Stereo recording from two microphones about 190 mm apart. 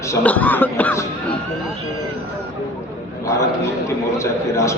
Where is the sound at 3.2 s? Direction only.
15° left (ahead or behind).